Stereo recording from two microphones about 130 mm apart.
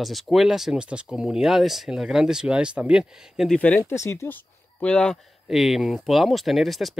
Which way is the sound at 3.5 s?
10° left (ahead or behind).